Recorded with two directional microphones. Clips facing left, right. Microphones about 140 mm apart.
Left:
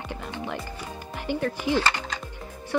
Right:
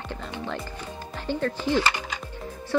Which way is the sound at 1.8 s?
15° right (ahead or behind).